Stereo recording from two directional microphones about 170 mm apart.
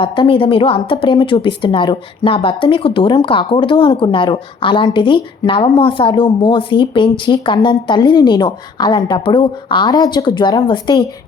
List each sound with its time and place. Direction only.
0.0 s a woman's voice: 30° left (ahead or behind)